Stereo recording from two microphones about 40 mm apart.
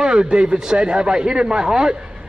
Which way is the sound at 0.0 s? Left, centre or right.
Right.